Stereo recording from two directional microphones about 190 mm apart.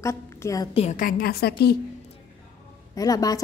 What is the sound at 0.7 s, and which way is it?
A woman's voice, 35° left (ahead or behind).